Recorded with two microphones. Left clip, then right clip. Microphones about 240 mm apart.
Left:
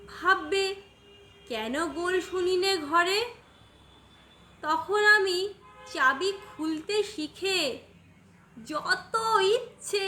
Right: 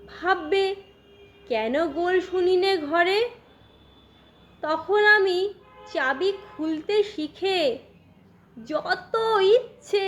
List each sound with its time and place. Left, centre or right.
0.1 s a woman's voice: centre
4.6 s a woman's voice: centre